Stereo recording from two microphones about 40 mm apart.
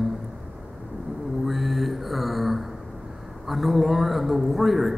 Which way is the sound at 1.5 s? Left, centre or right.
Centre.